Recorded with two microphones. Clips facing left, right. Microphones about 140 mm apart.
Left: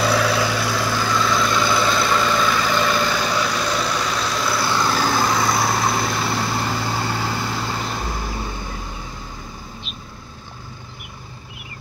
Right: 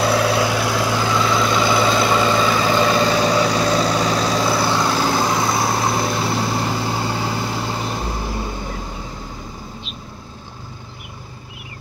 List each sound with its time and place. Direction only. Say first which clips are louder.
0.1 s vehicle: right 2 dB; 55° right (ahead or behind)
0.4 s vehicle: right 3 dB; 15° right (ahead or behind)